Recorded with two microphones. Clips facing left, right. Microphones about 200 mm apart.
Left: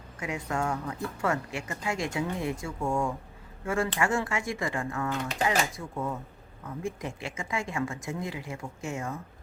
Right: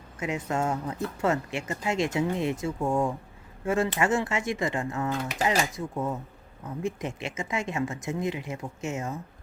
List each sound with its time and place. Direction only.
0.2 s speech: 25° right (ahead or behind)